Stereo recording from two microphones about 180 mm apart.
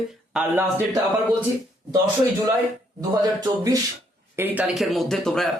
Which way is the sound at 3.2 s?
20° right (ahead or behind).